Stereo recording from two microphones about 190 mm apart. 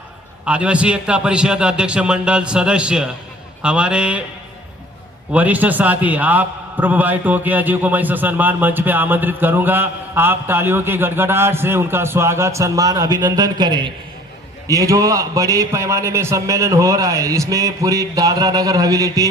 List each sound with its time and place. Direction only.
0.4 s a man's voice: 5° right (ahead or behind)
5.3 s a man's voice: 10° right (ahead or behind)